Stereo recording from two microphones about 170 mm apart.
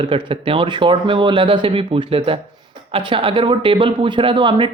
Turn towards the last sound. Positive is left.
turn(degrees=-30)  # may be behind; listen again after turning